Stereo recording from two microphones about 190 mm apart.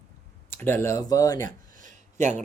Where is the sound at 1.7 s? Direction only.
40° right (ahead or behind).